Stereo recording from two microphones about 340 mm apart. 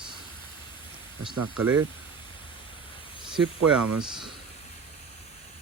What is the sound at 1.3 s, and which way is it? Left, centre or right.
Speech, right.